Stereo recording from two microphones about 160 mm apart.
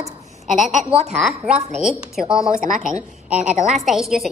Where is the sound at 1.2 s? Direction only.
5° right (ahead or behind).